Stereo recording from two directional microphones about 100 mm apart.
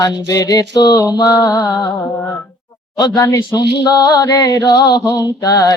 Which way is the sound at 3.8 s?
45° left (ahead or behind).